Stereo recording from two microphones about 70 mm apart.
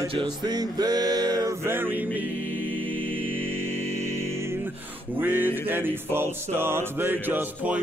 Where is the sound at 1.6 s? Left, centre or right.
Right.